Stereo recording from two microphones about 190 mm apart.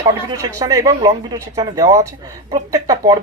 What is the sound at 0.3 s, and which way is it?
Speech, 20° right (ahead or behind).